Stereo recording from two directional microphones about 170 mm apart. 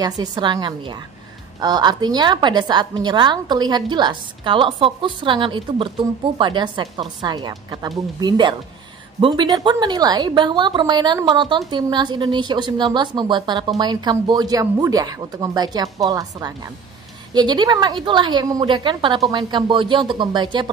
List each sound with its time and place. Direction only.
0.0 s a woman's voice: 25° right (ahead or behind)